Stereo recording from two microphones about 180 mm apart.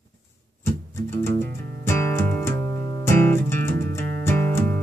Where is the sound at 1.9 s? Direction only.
15° left (ahead or behind).